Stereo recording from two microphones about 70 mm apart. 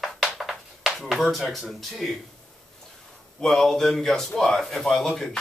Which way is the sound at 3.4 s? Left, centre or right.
Centre.